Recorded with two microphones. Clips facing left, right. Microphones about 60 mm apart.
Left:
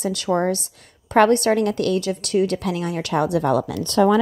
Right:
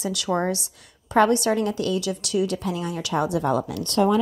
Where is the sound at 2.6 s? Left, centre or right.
Left.